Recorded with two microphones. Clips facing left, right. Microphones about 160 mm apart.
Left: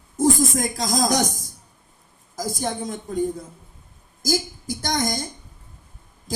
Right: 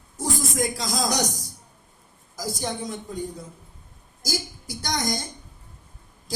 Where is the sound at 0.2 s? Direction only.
50° left (ahead or behind).